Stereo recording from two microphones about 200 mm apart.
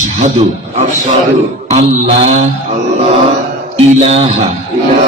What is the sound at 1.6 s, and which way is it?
Speech, 35° right (ahead or behind).